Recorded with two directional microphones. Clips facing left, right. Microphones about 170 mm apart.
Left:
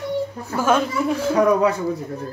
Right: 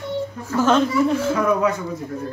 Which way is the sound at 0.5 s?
10° left (ahead or behind).